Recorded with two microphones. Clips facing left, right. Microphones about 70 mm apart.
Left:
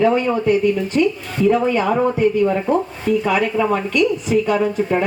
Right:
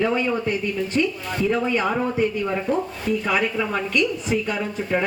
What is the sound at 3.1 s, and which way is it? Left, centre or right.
A woman's voice, left.